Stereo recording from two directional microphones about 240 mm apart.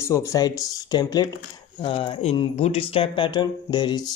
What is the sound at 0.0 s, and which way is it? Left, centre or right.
Speech, centre.